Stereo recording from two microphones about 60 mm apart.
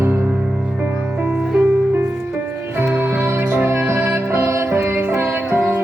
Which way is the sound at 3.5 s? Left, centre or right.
Right.